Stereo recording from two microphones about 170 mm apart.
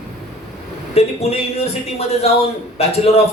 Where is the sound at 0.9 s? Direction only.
35° left (ahead or behind).